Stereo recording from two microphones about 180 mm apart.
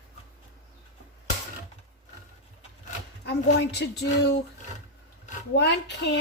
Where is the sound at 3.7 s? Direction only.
70° left (ahead or behind).